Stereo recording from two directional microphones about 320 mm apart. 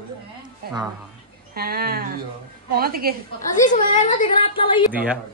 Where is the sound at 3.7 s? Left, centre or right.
Left.